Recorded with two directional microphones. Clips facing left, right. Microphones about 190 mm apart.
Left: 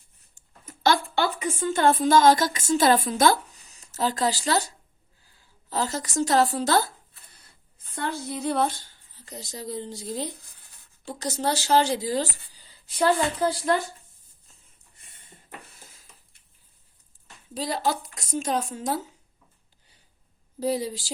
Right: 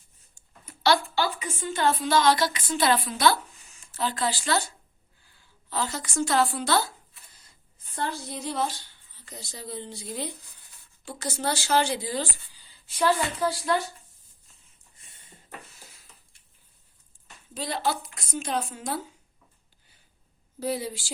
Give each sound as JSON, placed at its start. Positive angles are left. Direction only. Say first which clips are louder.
{"t": 0.3, "sound": "a sound", "louder": "left 3 dB", "side_deg": 45}
{"t": 1.1, "sound": "a woman's voice", "louder": "left 3 dB", "side_deg": 45}
{"t": 5.7, "sound": "speech", "louder": "left 3 dB", "side_deg": 40}
{"t": 8.0, "sound": "speech", "louder": "left 4 dB", "side_deg": 60}
{"t": 15.6, "sound": "a sound", "louder": "even", "side_deg": 55}
{"t": 17.5, "sound": "a woman's voice", "louder": "left 2 dB", "side_deg": 40}
{"t": 20.6, "sound": "speech", "louder": "left 3 dB", "side_deg": 35}